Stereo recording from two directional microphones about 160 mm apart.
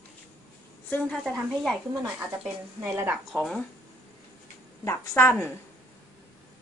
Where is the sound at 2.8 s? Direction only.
15° right (ahead or behind).